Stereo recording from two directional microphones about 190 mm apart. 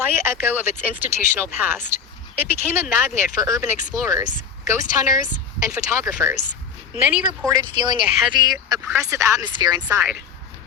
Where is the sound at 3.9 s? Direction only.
15° right (ahead or behind).